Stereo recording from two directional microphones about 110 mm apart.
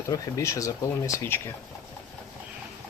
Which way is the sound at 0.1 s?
30° left (ahead or behind).